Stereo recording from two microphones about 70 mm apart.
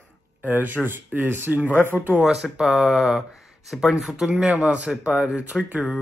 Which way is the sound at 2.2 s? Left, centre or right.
Centre.